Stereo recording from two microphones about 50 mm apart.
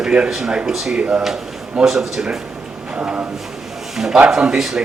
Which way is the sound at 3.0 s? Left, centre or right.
Right.